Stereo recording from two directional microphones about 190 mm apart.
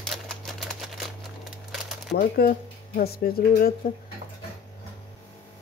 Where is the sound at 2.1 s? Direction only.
50° left (ahead or behind).